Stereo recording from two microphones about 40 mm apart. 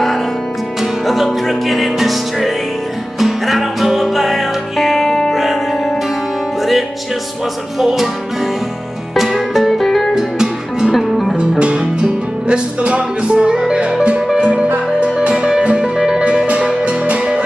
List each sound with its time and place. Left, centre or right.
1.0 s music: centre
5.3 s music: centre
7.8 s music: centre
9.1 s music: centre
10.1 s music: centre
11.0 s music: centre
11.3 s music: right